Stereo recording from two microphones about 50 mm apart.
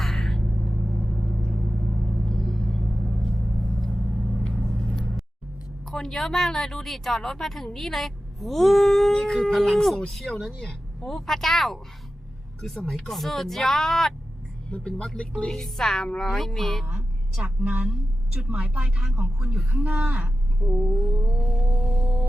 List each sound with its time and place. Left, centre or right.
0.0 s a sound: centre
0.7 s vehicle: centre
2.3 s rumble: centre
2.9 s vehicle: right
5.8 s speech: centre
10.6 s speech: centre
14.7 s speech: centre
15.4 s speech: centre
17.4 s a woman's voice: right
20.7 s speech: centre